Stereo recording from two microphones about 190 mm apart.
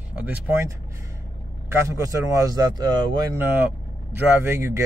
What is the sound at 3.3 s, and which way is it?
Speech, 10° right (ahead or behind).